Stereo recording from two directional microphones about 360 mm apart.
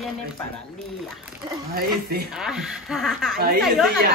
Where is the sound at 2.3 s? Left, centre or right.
Centre.